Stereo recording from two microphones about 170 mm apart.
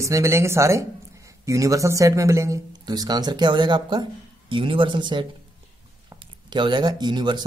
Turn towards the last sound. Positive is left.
turn(degrees=-25)  # may be behind; listen again after turning